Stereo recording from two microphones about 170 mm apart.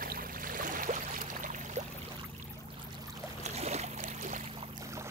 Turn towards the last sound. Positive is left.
turn(degrees=-45)  # may be behind; listen again after turning